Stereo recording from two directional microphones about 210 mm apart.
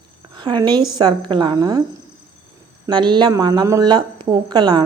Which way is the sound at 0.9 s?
20° right (ahead or behind).